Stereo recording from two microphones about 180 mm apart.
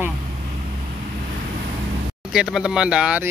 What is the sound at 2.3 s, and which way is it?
Speech, 5° right (ahead or behind).